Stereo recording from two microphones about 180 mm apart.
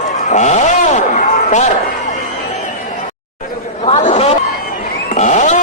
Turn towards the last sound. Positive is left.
turn(degrees=40)  # may be behind; listen again after turning